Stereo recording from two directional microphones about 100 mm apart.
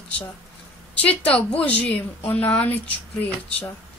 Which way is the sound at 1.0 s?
10° left (ahead or behind).